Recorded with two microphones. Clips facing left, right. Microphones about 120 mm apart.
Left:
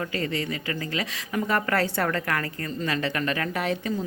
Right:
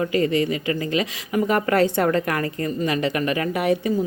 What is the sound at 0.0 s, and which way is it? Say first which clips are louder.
Speech: right 8 dB; 15° right (ahead or behind).